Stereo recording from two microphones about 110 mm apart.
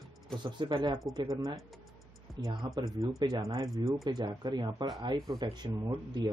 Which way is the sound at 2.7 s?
30° right (ahead or behind).